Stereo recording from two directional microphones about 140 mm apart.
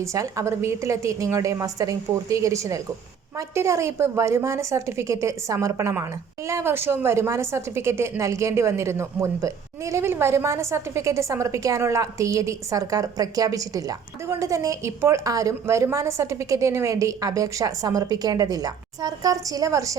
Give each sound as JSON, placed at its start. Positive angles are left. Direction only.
{"t": 0.0, "sound": "a woman's voice", "side_deg": -20}